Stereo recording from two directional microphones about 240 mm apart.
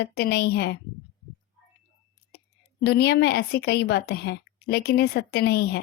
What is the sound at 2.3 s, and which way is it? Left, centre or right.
A woman's voice, left.